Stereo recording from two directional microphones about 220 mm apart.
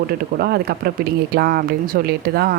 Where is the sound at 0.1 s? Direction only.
45° right (ahead or behind).